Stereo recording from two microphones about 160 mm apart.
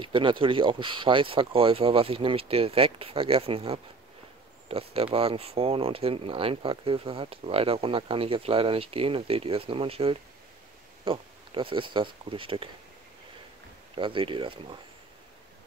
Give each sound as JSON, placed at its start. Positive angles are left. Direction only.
{"t": 0.0, "sound": "speech", "side_deg": -30}
{"t": 13.9, "sound": "speech", "side_deg": -30}